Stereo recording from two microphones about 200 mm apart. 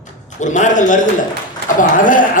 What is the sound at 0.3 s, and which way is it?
A man's voice, 40° left (ahead or behind).